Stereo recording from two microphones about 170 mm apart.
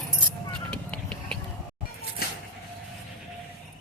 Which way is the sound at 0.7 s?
5° left (ahead or behind).